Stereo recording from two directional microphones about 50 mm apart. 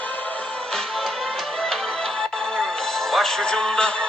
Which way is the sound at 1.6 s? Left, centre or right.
Centre.